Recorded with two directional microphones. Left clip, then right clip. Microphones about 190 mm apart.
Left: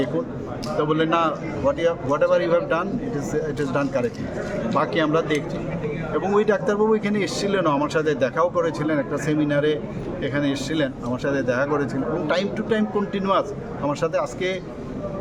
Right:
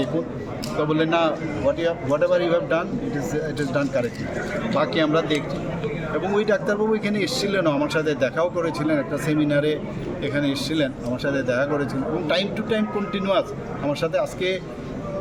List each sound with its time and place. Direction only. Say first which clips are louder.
0.9 s speech: even; 5° left (ahead or behind)
4.7 s a man's voice: even; 5° left (ahead or behind)